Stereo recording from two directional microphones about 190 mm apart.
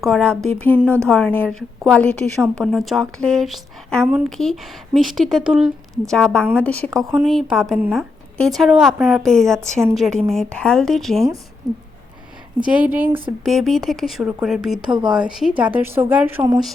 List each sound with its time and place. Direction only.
0.0 s a woman's voice: 5° left (ahead or behind)
11.6 s speech: 20° right (ahead or behind)
12.6 s a woman's voice: 5° right (ahead or behind)